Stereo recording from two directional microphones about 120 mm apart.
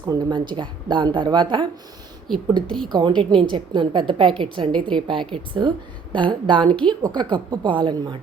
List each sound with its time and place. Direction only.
0.0 s a woman's voice: 35° right (ahead or behind)
2.3 s a woman's voice: 5° left (ahead or behind)
2.9 s a woman's voice: 40° right (ahead or behind)
6.7 s a woman's voice: 10° left (ahead or behind)
7.0 s a woman's voice: 40° right (ahead or behind)